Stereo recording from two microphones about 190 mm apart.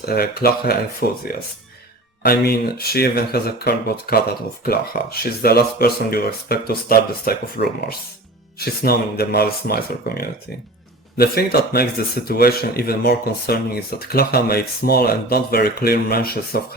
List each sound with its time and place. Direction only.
0.0 s speech: 55° left (ahead or behind)